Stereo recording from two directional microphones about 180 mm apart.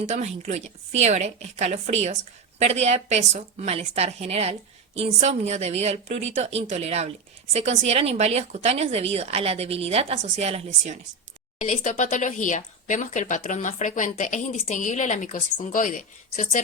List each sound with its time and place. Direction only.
0.0 s a woman's voice: 40° right (ahead or behind)
11.6 s speech: 45° left (ahead or behind)